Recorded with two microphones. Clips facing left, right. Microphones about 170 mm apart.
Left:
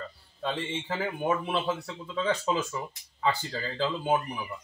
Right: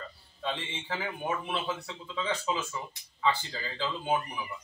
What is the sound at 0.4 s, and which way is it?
Speech, 45° left (ahead or behind).